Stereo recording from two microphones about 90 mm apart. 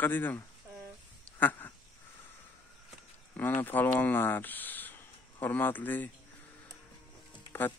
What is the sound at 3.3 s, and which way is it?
Speech, 20° left (ahead or behind).